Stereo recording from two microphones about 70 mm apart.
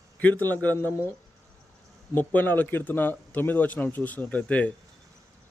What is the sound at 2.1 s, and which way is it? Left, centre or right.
Speech, left.